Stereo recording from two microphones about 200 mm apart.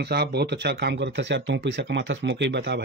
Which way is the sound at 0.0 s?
55° right (ahead or behind).